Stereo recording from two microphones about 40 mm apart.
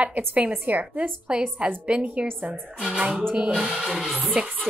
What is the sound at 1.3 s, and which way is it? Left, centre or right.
Speech, right.